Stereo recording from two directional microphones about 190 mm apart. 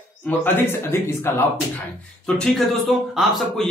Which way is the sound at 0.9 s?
10° left (ahead or behind).